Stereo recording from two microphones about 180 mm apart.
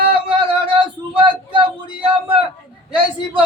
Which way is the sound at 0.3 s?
30° right (ahead or behind).